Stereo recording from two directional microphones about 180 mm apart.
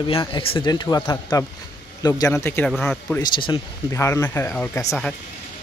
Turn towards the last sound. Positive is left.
turn(degrees=15)  # may be behind; listen again after turning